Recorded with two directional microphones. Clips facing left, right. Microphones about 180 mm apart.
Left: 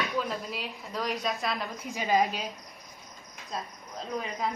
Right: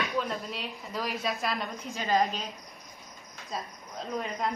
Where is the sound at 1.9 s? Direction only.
15° left (ahead or behind).